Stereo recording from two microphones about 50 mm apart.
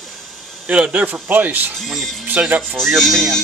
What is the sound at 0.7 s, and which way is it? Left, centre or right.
Speech, right.